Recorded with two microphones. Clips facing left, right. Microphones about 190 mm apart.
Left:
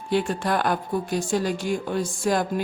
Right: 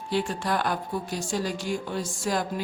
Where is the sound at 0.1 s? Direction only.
55° left (ahead or behind).